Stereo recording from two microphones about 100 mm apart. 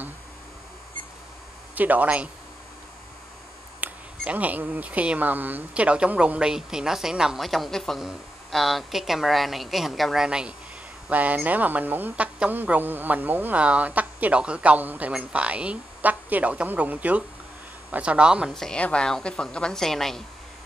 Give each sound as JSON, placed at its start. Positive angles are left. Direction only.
{"t": 1.8, "sound": "speech", "side_deg": -15}
{"t": 3.8, "sound": "speech", "side_deg": -15}
{"t": 18.5, "sound": "a woman's voice", "side_deg": 5}